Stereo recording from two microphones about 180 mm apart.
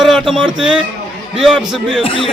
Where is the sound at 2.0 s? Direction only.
30° left (ahead or behind).